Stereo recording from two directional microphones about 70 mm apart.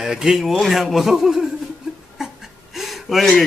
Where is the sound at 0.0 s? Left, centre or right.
Centre.